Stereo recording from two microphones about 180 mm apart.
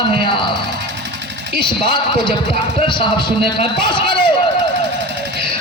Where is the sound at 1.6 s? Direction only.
25° left (ahead or behind).